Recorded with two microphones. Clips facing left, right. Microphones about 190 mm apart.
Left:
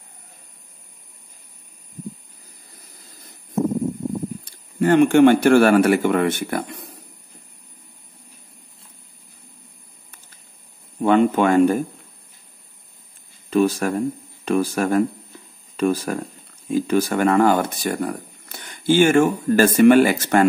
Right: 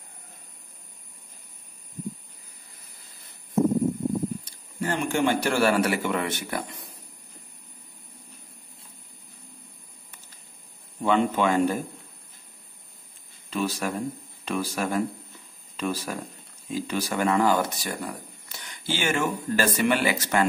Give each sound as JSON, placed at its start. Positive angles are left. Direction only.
{"t": 4.7, "sound": "speech", "side_deg": 60}
{"t": 11.0, "sound": "speech", "side_deg": 55}
{"t": 13.5, "sound": "speech", "side_deg": 50}